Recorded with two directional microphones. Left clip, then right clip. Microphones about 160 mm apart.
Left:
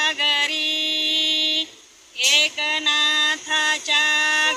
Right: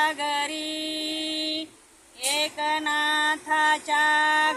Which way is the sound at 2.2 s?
5° right (ahead or behind).